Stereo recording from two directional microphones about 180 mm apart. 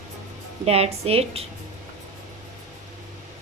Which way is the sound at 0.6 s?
35° right (ahead or behind).